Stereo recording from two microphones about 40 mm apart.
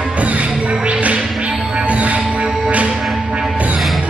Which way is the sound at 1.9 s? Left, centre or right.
Right.